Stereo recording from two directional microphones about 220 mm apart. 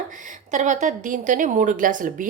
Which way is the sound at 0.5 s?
35° right (ahead or behind).